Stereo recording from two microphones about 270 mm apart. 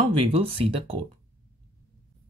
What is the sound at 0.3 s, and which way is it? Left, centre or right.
Speech, right.